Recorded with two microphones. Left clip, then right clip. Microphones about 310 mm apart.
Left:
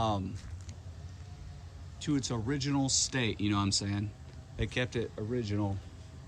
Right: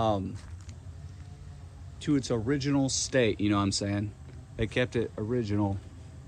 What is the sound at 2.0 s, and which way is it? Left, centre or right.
Speech, centre.